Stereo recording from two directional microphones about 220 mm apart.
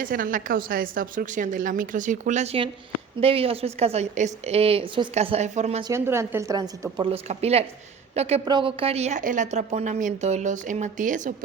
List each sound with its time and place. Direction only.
0.0 s a woman's voice: 40° right (ahead or behind)
5.9 s a woman's voice: 10° right (ahead or behind); by 11.3 s 35° right (ahead or behind)